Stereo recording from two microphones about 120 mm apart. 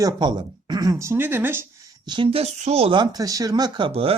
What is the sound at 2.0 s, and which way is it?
Speech, 40° right (ahead or behind).